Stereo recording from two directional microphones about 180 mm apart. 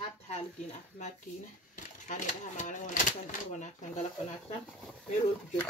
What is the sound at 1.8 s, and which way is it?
Speech, 45° left (ahead or behind).